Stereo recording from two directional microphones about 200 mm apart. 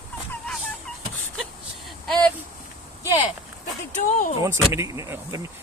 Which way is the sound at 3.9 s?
40° left (ahead or behind).